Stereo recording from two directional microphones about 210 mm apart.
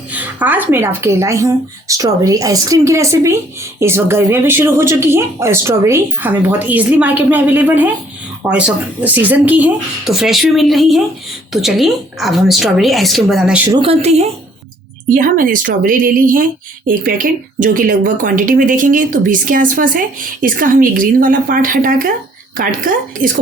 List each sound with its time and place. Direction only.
0.1 s speech: 10° right (ahead or behind)
13.7 s a woman's voice: 25° right (ahead or behind)
15.1 s speech: 40° right (ahead or behind)